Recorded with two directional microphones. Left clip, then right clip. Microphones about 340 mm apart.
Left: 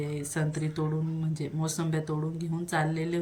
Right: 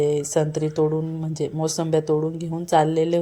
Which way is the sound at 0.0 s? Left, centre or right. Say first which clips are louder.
Right 14 dB; centre.